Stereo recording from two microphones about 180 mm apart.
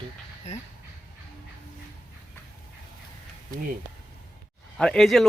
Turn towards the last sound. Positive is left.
turn(degrees=0)  # may be behind; listen again after turning